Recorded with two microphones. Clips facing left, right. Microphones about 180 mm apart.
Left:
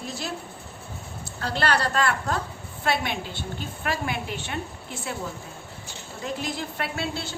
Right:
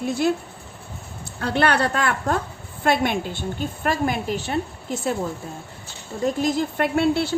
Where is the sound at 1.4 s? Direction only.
60° right (ahead or behind); by 5.2 s 40° right (ahead or behind).